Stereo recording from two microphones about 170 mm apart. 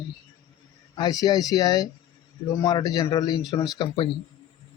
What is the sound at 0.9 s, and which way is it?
Speech, 25° left (ahead or behind).